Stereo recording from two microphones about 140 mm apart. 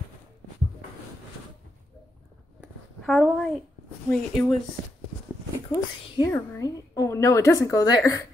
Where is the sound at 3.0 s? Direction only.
Centre (ahead or behind).